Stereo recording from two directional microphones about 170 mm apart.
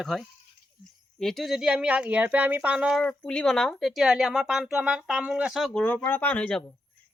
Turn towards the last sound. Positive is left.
turn(degrees=5)  # may be behind; listen again after turning